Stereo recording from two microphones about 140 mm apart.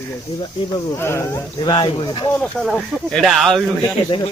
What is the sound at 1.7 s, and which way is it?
Speech, 35° left (ahead or behind).